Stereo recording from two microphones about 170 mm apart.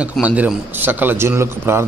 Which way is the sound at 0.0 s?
5° right (ahead or behind).